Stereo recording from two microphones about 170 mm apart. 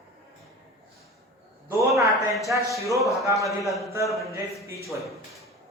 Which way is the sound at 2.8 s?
20° right (ahead or behind).